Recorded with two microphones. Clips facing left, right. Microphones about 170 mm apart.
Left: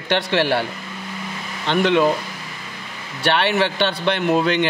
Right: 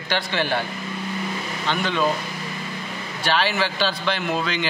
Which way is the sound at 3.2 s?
65° left (ahead or behind).